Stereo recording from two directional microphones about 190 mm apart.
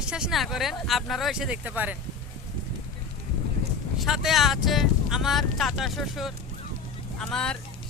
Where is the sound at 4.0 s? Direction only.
Centre (ahead or behind).